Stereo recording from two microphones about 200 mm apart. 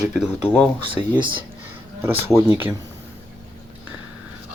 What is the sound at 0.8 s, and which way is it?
Speech, 25° right (ahead or behind).